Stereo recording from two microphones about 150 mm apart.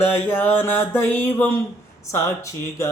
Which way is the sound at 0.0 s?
15° left (ahead or behind).